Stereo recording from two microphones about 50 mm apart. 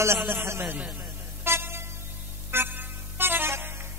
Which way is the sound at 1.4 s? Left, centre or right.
Right.